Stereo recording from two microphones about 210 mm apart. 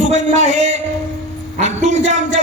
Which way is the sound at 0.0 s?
35° right (ahead or behind).